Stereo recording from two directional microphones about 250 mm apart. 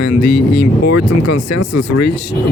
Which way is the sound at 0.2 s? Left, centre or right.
Left.